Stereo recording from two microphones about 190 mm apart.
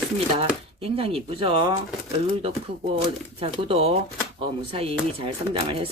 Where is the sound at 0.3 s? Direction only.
30° right (ahead or behind).